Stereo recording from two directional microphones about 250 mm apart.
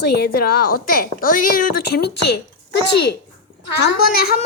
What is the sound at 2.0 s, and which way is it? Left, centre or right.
Speech, left.